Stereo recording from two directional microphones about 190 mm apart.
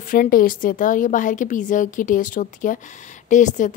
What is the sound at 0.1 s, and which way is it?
A woman's voice, 45° left (ahead or behind).